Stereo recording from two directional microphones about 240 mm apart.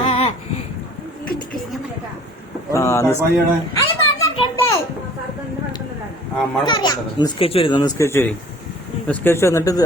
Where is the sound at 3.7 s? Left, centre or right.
Centre.